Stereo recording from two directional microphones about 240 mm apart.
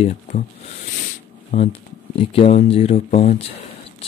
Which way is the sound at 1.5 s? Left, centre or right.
Left.